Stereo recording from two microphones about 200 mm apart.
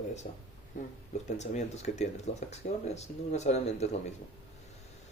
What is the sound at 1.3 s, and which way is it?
Speech, 35° left (ahead or behind).